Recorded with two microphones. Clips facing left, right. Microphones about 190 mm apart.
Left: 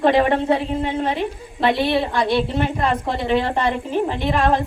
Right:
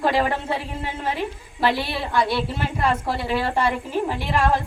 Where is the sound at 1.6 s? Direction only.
20° left (ahead or behind).